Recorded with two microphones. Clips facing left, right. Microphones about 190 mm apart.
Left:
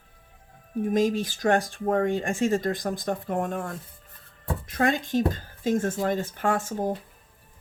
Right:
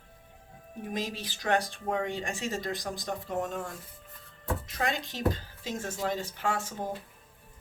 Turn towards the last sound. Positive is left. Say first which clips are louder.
# left 6 dB
turn(degrees=50)  # may be behind; listen again after turning